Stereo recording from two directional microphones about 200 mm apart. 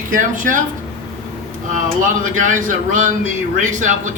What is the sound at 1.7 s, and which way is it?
Speech, 40° right (ahead or behind).